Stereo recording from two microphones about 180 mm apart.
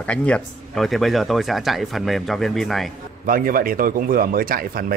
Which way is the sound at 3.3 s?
50° right (ahead or behind).